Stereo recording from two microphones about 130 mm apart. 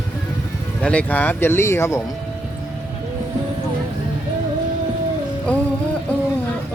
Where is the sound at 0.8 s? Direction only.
10° left (ahead or behind).